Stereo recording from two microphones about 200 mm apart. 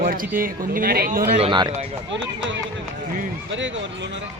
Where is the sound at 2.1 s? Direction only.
65° right (ahead or behind).